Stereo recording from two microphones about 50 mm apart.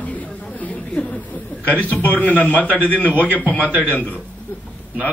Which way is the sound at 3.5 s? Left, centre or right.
Right.